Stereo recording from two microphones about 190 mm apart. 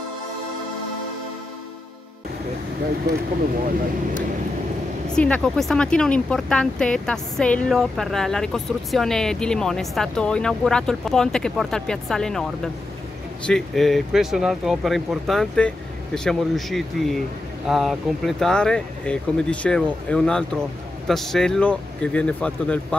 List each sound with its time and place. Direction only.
5.1 s speech: 5° left (ahead or behind)
13.5 s speech: centre (ahead or behind)